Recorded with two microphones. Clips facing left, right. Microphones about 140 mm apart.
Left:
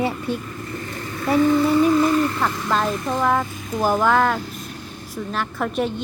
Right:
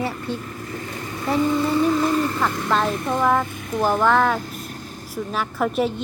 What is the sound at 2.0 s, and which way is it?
A woman's voice, centre (ahead or behind).